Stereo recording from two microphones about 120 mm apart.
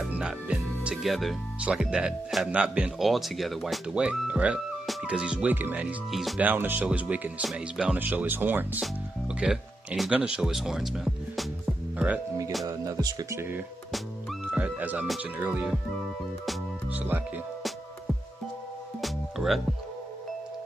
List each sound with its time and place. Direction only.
0.1 s speech: 10° right (ahead or behind)
6.1 s speech: centre (ahead or behind)
6.4 s speech: 15° right (ahead or behind)
12.6 s speech: 30° right (ahead or behind)
14.5 s music: 15° right (ahead or behind)
15.3 s speech: 15° right (ahead or behind)
16.9 s speech: 10° right (ahead or behind)
18.9 s music: centre (ahead or behind)